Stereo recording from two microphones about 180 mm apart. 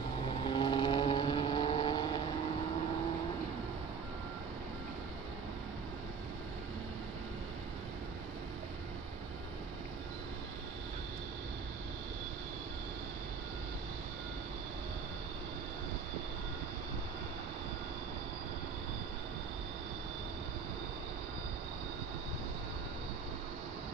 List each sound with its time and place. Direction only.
0.5 s vehicle: 25° left (ahead or behind)